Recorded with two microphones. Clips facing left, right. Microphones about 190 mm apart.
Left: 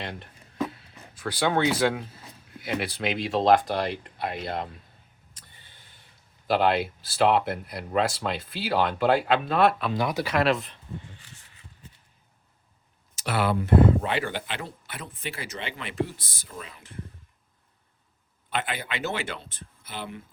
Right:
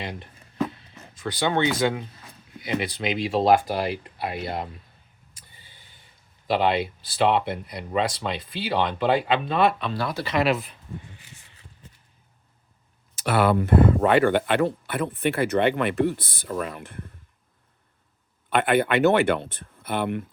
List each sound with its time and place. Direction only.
0.0 s a sound: centre (ahead or behind)
0.9 s speech: 5° left (ahead or behind)
5.5 s a sound: 5° right (ahead or behind)
6.5 s speech: centre (ahead or behind)
9.9 s speech: 15° left (ahead or behind)
10.3 s speech: 5° right (ahead or behind)
13.1 s speech: 55° right (ahead or behind)
18.5 s speech: 60° right (ahead or behind)